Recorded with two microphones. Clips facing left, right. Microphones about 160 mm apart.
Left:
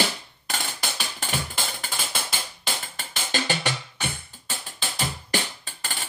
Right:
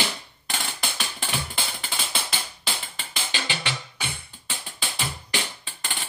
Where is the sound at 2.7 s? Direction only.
45° left (ahead or behind).